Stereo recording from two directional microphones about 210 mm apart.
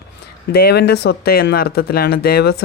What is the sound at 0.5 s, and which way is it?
Speech, 50° left (ahead or behind).